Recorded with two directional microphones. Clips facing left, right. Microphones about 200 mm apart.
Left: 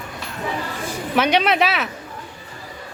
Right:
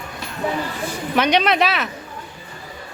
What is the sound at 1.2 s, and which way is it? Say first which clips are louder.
Speech: even; 5° left (ahead or behind).